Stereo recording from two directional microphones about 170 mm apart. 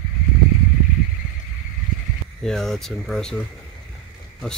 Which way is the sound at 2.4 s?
5° left (ahead or behind).